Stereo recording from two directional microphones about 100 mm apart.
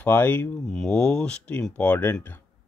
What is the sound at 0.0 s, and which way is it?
Speech, 20° left (ahead or behind).